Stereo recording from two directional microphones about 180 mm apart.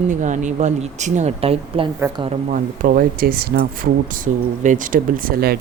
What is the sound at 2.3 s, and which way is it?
Speech, 45° right (ahead or behind).